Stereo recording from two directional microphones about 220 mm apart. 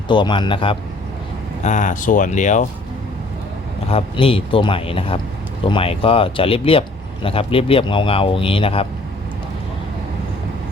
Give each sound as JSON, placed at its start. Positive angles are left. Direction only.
{"t": 0.1, "sound": "speech", "side_deg": 20}
{"t": 1.6, "sound": "speech", "side_deg": 35}
{"t": 3.8, "sound": "speech", "side_deg": 25}